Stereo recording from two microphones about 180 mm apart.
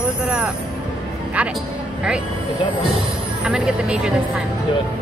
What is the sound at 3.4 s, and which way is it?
Speech, 5° right (ahead or behind).